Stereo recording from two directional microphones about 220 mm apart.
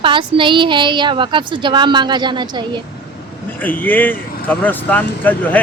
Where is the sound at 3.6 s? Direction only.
10° left (ahead or behind).